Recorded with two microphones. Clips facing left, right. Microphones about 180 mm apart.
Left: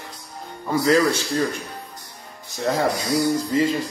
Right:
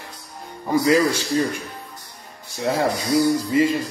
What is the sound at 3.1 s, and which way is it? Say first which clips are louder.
Speech: right 4 dB; 10° right (ahead or behind).